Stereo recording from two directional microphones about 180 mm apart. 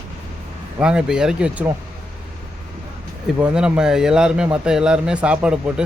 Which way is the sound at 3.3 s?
5° right (ahead or behind).